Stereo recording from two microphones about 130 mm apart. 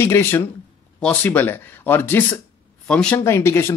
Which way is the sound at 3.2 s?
20° left (ahead or behind).